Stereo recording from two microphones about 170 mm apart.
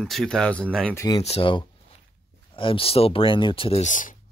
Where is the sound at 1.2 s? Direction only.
35° left (ahead or behind).